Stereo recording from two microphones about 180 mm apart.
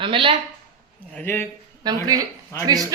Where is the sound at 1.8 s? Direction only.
20° right (ahead or behind).